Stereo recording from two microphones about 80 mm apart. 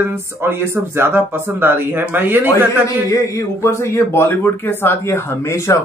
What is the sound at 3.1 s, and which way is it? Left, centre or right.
Speech, left.